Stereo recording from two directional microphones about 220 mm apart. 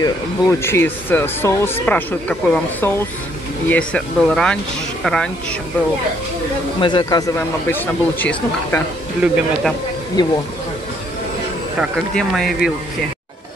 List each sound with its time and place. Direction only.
0.0 s speech: 10° left (ahead or behind)
6.8 s speech: 20° left (ahead or behind)
9.2 s speech: 5° right (ahead or behind)
10.2 s speech: 20° left (ahead or behind)
11.8 s speech: centre (ahead or behind)